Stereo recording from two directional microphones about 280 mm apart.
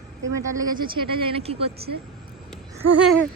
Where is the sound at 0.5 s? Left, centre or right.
Centre.